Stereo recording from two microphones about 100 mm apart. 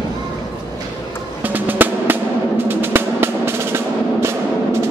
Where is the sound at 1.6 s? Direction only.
20° right (ahead or behind).